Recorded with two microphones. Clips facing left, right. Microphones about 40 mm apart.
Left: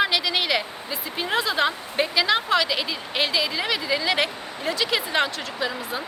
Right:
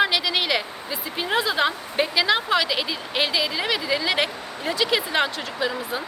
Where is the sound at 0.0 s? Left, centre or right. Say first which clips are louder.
Right 1 dB; centre.